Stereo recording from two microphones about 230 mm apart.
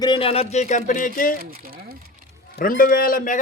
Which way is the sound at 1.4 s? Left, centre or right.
Right.